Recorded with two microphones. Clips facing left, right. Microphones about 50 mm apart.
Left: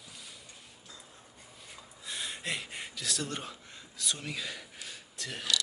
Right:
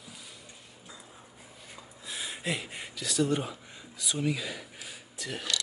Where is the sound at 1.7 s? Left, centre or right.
Centre.